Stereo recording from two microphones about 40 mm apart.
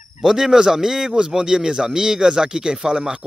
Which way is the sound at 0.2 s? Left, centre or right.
Centre.